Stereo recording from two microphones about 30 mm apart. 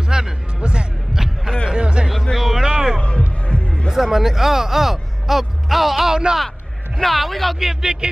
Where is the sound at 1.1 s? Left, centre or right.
Centre.